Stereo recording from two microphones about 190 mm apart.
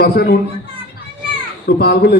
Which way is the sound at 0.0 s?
55° left (ahead or behind).